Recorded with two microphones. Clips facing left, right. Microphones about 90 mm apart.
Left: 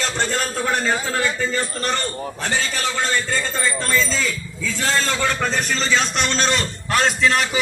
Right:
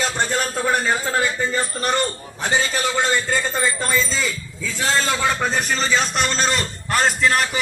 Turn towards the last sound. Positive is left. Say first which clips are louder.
# even
turn(degrees=0)  # may be behind; listen again after turning